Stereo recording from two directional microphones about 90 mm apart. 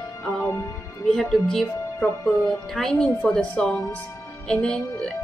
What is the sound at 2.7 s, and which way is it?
Speech, 10° left (ahead or behind).